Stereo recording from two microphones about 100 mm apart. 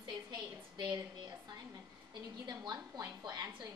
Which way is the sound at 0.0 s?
45° right (ahead or behind).